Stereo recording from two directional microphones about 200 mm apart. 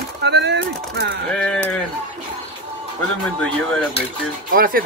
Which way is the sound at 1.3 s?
5° left (ahead or behind).